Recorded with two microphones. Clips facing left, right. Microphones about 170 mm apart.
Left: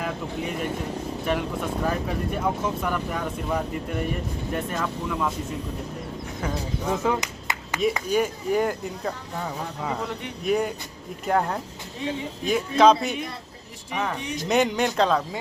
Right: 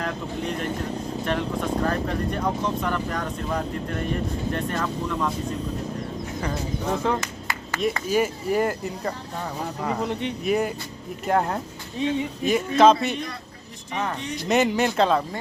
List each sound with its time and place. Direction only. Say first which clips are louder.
0.0 s speech: right 1 dB; 5° left (ahead or behind)
6.3 s speech: even; centre (ahead or behind)
7.2 s clapping: even; 20° left (ahead or behind)
8.0 s speech: right 1 dB; 5° right (ahead or behind)
10.0 s speech: right 5 dB; 20° right (ahead or behind)
10.4 s speech: left 1 dB; centre (ahead or behind)
12.0 s speech: right 5 dB; 20° right (ahead or behind)
12.5 s speech: right 1 dB; centre (ahead or behind)
13.9 s speech: even; 10° left (ahead or behind)
14.4 s speech: right 1 dB; centre (ahead or behind)